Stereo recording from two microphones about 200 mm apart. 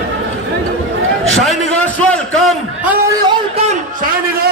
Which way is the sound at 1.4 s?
Centre (ahead or behind).